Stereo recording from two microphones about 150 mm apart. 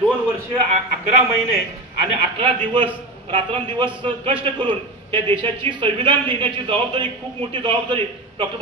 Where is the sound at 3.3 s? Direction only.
35° right (ahead or behind).